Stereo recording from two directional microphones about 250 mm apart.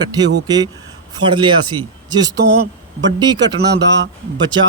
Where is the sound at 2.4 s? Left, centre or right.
Right.